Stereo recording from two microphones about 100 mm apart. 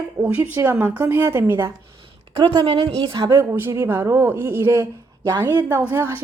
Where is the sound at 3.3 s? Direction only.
25° right (ahead or behind).